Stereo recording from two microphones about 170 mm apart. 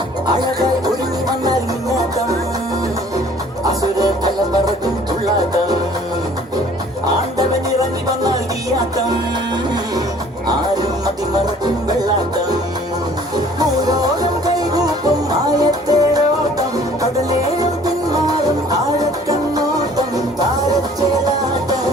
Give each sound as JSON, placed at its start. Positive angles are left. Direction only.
{"t": 3.7, "sound": "music", "side_deg": -20}
{"t": 13.3, "sound": "music", "side_deg": -25}